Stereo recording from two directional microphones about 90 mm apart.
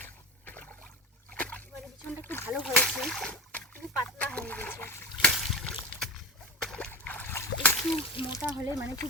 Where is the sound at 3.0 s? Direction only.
5° left (ahead or behind); by 5.0 s 25° left (ahead or behind).